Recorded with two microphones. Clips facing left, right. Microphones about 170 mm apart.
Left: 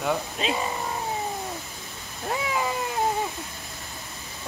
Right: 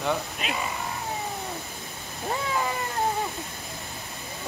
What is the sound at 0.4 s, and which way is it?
Speech, 25° left (ahead or behind).